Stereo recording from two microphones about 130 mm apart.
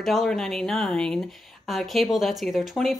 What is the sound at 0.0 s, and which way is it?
A woman's voice, centre (ahead or behind).